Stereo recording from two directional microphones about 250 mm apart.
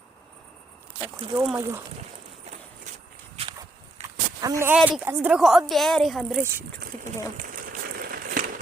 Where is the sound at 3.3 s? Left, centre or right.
Right.